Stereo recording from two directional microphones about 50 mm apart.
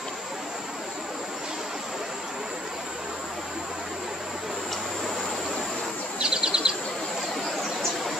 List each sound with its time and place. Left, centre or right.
6.1 s bird: centre